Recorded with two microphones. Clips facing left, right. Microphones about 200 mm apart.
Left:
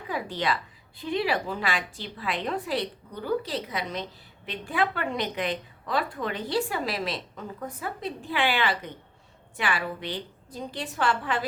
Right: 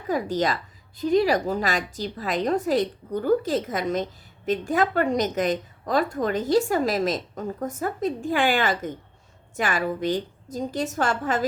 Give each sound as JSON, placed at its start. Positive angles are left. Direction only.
{"t": 0.1, "sound": "a woman's voice", "side_deg": -40}